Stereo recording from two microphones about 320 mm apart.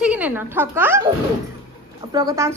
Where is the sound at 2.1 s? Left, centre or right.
Centre.